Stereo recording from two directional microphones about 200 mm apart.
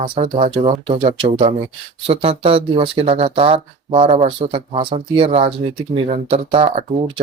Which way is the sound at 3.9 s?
35° right (ahead or behind).